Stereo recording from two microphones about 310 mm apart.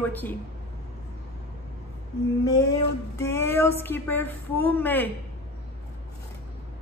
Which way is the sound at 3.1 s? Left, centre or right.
Centre.